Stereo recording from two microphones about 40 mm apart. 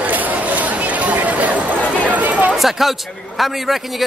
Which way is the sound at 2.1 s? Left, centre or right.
Right.